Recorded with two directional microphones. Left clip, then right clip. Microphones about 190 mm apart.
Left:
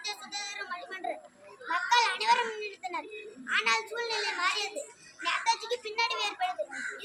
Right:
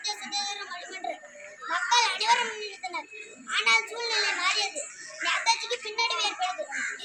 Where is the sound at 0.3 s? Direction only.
25° left (ahead or behind).